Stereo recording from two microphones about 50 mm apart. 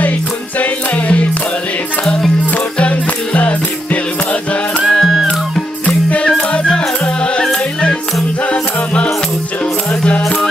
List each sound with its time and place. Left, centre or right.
0.6 s music: left
3.3 s music: left
4.8 s music: centre
6.2 s music: left
10.2 s music: centre